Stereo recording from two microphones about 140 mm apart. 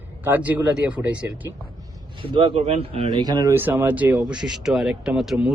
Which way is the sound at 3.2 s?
30° right (ahead or behind).